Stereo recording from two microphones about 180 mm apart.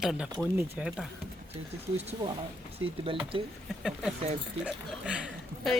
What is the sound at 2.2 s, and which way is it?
Speech, 25° right (ahead or behind).